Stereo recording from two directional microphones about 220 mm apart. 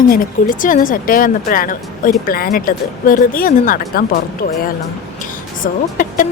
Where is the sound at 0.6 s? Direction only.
35° left (ahead or behind).